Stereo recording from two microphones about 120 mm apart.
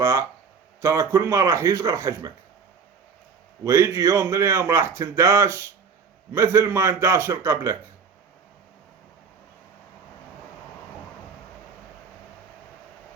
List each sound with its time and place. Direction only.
0.0 s speech: 25° right (ahead or behind)
3.6 s speech: 25° right (ahead or behind)